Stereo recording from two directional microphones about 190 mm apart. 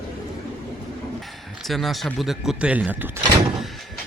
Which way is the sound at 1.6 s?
Centre (ahead or behind).